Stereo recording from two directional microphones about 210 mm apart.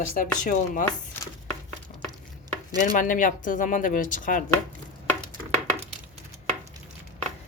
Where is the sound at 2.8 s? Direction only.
40° left (ahead or behind).